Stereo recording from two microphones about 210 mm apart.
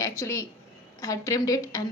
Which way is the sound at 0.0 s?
15° left (ahead or behind).